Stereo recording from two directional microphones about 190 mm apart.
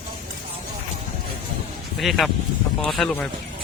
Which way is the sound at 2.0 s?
Centre (ahead or behind).